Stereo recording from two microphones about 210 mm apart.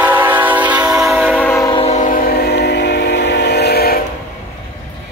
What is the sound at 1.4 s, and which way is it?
Train, 15° left (ahead or behind).